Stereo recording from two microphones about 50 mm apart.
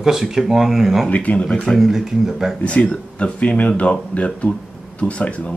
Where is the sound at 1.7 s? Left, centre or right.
Centre.